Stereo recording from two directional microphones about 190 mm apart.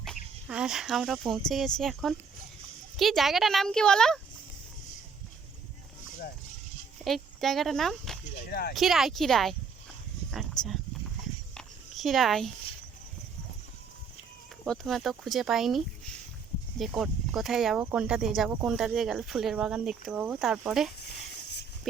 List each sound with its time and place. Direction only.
0.4 s speech: 5° right (ahead or behind)
7.0 s speech: centre (ahead or behind)
8.4 s speech: 55° left (ahead or behind)
8.7 s speech: centre (ahead or behind)
10.6 s speech: 5° left (ahead or behind)
11.5 s a sound: centre (ahead or behind)
14.6 s speech: centre (ahead or behind)